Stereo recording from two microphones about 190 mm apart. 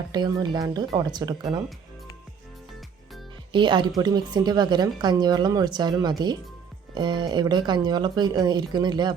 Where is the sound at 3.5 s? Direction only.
25° right (ahead or behind).